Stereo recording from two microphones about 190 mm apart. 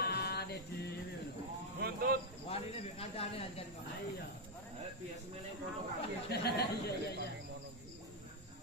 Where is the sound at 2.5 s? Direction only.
30° left (ahead or behind).